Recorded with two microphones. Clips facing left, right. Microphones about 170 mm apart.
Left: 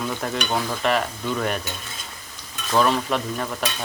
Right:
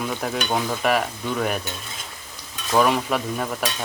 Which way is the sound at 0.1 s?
5° right (ahead or behind).